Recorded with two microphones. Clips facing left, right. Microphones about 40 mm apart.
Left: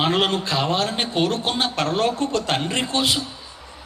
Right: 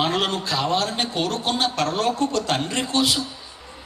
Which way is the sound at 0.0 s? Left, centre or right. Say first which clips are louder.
Left 2 dB; left.